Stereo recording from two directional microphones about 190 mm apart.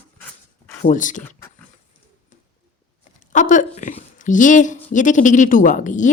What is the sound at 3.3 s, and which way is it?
Speech, 40° left (ahead or behind).